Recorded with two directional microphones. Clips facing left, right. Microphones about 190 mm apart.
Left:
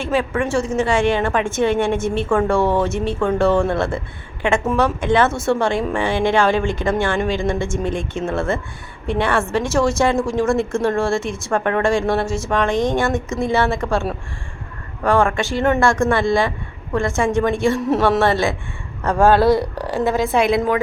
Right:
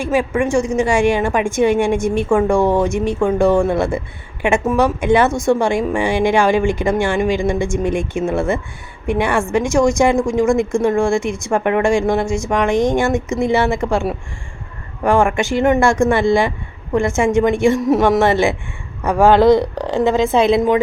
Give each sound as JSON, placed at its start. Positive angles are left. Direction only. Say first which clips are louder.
{"t": 0.0, "sound": "a woman's voice", "louder": "right 3 dB", "side_deg": -10}
{"t": 17.2, "sound": "a woman's voice", "louder": "right 3 dB", "side_deg": -15}